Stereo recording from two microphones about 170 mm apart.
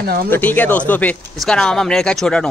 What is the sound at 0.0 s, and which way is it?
Speech, 65° right (ahead or behind).